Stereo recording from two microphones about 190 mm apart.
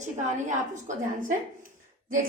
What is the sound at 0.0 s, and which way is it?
A woman's voice, 40° right (ahead or behind).